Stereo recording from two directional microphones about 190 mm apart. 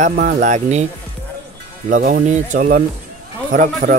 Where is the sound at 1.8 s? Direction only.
45° right (ahead or behind).